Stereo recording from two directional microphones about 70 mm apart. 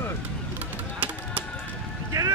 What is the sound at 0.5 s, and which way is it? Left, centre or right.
Music, right.